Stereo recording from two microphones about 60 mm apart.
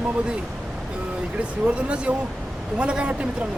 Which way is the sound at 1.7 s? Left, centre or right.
Centre.